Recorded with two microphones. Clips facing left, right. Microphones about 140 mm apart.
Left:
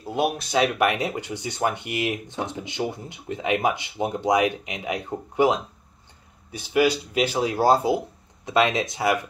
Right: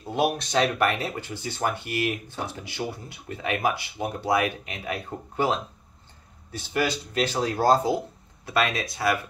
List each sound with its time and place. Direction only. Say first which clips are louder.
0.0 s speech: even; 5° left (ahead or behind)
8.5 s speech: left 4 dB; 20° left (ahead or behind)